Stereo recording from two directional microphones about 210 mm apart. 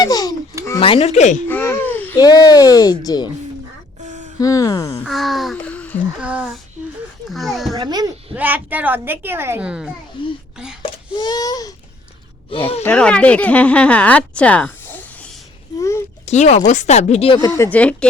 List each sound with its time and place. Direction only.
0.0 s speech: 20° left (ahead or behind)
0.8 s speech: 30° left (ahead or behind)
1.5 s a sound: 10° left (ahead or behind)
2.1 s speech: 20° left (ahead or behind)
4.0 s a sound: 35° right (ahead or behind)
4.4 s speech: 15° left (ahead or behind)
5.0 s a sound: centre (ahead or behind)
6.1 s speech: 5° right (ahead or behind)
7.7 s a child's voice: 20° right (ahead or behind)
8.4 s a woman's voice: 10° right (ahead or behind)
10.2 s speech: 25° left (ahead or behind)
12.8 s speech: 5° left (ahead or behind)
15.8 s a sound: 15° left (ahead or behind)
16.2 s speech: 35° left (ahead or behind); by 17.9 s 5° left (ahead or behind)